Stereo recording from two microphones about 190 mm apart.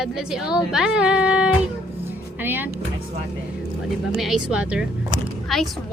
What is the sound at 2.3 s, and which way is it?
Power windows, 10° right (ahead or behind).